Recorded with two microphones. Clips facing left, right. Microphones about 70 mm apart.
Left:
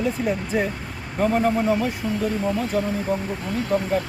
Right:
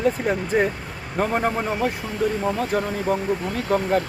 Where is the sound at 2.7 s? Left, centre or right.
Right.